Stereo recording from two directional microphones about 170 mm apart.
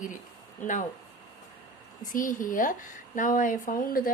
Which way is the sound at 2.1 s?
55° left (ahead or behind).